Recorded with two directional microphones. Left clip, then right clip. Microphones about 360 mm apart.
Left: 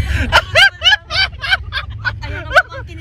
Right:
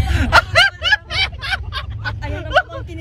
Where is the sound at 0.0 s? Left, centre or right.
Centre.